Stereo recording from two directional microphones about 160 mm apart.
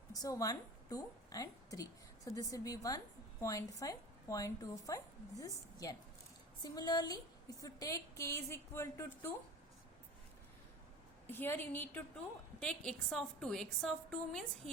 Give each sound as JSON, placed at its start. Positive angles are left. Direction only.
{"t": 0.1, "sound": "a woman's voice", "side_deg": 20}
{"t": 11.3, "sound": "a woman's voice", "side_deg": 15}